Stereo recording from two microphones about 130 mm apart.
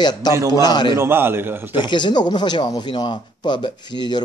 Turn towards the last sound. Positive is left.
turn(degrees=35)  # may be behind; listen again after turning